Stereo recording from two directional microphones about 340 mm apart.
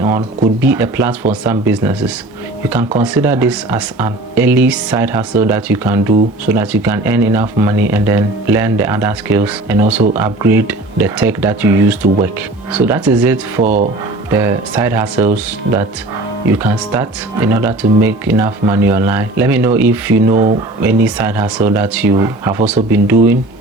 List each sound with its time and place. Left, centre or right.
0.6 s speech: centre
13.6 s speech: right
14.3 s speech: centre
16.5 s speech: centre